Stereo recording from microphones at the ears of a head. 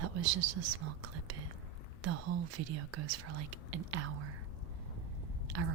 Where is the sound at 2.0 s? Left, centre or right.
Right.